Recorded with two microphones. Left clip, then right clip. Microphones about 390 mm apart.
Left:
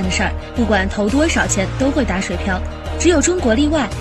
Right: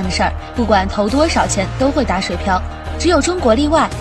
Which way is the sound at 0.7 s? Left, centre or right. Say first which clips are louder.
Right 3 dB; centre.